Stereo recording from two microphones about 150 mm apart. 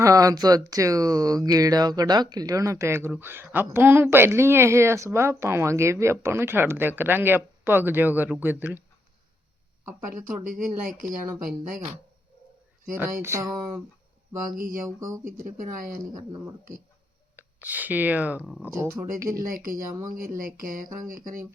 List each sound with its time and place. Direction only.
0.0 s speech: 20° right (ahead or behind)
10.1 s speech: 65° right (ahead or behind)
13.2 s speech: 20° right (ahead or behind)
14.8 s speech: 20° right (ahead or behind)
15.4 s speech: 65° right (ahead or behind)
17.3 s speech: 10° right (ahead or behind)
18.8 s speech: 20° right (ahead or behind)
19.5 s speech: 70° right (ahead or behind)
19.9 s speech: 25° right (ahead or behind)
20.1 s speech: 70° right (ahead or behind)